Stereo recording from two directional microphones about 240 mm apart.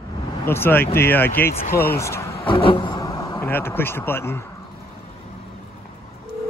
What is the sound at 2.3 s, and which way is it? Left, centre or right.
Speech, left.